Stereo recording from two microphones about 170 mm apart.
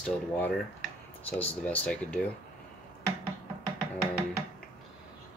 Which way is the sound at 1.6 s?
10° left (ahead or behind).